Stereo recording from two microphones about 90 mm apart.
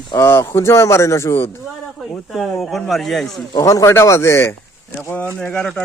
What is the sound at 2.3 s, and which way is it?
Speech, centre (ahead or behind).